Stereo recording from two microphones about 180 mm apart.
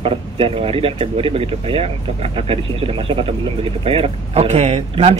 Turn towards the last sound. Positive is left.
turn(degrees=-35)  # may be behind; listen again after turning